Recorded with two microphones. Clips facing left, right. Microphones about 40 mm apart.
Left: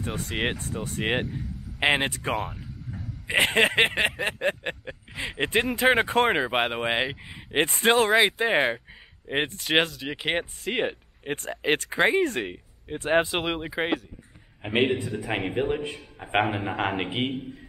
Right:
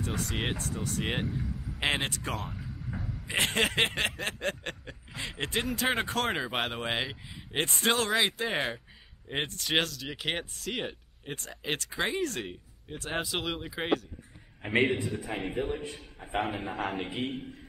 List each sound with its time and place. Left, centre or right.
0.0 s speech: left
0.3 s snicker: centre
1.2 s vehicle: centre
1.8 s snicker: left
15.2 s a man's voice: left
16.3 s a man's voice: left